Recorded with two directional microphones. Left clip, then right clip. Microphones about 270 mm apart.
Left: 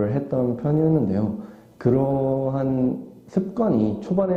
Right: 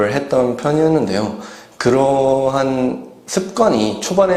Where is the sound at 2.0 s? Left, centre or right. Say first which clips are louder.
Right 9 dB; right.